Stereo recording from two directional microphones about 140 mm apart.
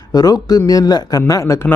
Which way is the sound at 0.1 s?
25° left (ahead or behind).